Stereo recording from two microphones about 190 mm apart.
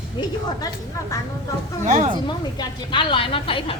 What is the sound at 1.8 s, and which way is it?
Speech, 35° right (ahead or behind).